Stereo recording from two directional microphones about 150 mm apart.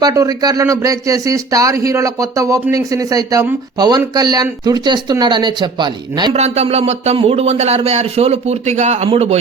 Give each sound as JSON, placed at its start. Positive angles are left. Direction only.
{"t": 0.0, "sound": "speech", "side_deg": -25}
{"t": 6.3, "sound": "a man's voice", "side_deg": -45}